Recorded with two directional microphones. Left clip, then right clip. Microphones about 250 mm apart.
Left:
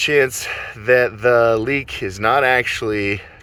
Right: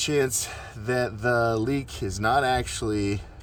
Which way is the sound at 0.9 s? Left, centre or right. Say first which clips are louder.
Left 11 dB; centre.